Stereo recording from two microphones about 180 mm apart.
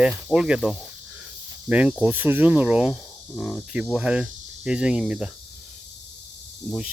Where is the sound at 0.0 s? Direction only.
5° right (ahead or behind).